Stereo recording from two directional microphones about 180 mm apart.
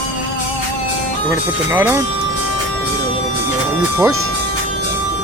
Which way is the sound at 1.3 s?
15° right (ahead or behind).